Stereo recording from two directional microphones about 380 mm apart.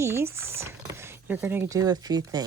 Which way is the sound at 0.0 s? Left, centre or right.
Centre.